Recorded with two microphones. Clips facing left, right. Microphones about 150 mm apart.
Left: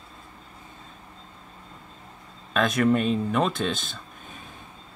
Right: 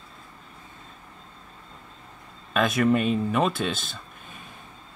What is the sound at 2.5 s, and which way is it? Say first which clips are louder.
Speech: even; 5° right (ahead or behind).